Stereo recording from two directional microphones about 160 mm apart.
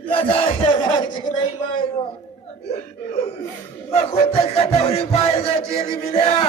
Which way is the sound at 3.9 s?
35° left (ahead or behind).